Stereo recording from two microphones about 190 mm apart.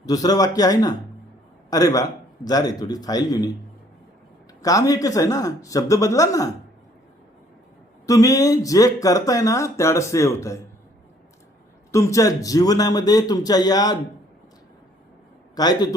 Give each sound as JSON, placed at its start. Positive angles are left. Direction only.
{"t": 0.0, "sound": "a man's voice", "side_deg": 20}
{"t": 4.6, "sound": "speech", "side_deg": 20}
{"t": 8.0, "sound": "speech", "side_deg": 20}
{"t": 11.9, "sound": "a man's voice", "side_deg": 15}
{"t": 15.5, "sound": "a man's voice", "side_deg": 20}